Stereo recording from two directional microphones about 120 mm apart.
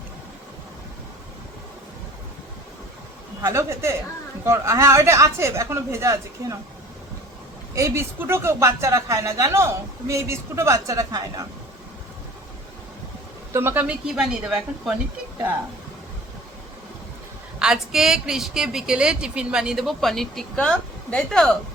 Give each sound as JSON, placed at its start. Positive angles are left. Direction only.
{"t": 3.4, "sound": "speech", "side_deg": -25}
{"t": 7.8, "sound": "speech", "side_deg": -20}
{"t": 13.5, "sound": "speech", "side_deg": -20}
{"t": 13.8, "sound": "a woman's voice", "side_deg": -10}
{"t": 17.6, "sound": "a woman's voice", "side_deg": -5}